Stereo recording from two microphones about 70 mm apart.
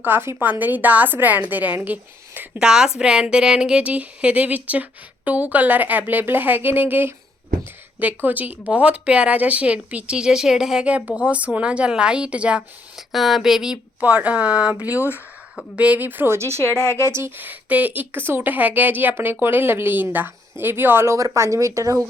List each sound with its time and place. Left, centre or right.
0.0 s a woman's voice: right
2.6 s a woman's voice: centre
13.0 s speech: centre
14.0 s a woman's voice: right
21.2 s speech: right